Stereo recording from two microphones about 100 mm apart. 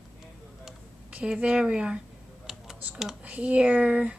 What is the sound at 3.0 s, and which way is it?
Speech, 10° right (ahead or behind).